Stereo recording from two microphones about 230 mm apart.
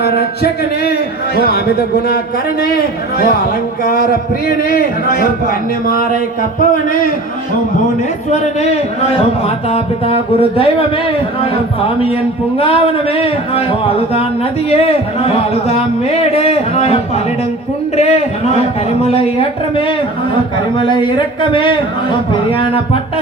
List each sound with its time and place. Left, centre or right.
0.0 s speech: left
2.7 s a man's voice: left
8.3 s speech: left
12.5 s speech: left